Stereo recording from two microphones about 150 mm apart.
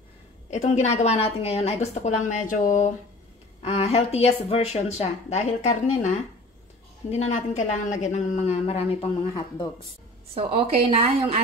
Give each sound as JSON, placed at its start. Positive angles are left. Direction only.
{"t": 0.5, "sound": "speech", "side_deg": 50}
{"t": 3.6, "sound": "speech", "side_deg": 40}
{"t": 9.3, "sound": "speech", "side_deg": 30}
{"t": 10.3, "sound": "a woman's voice", "side_deg": -40}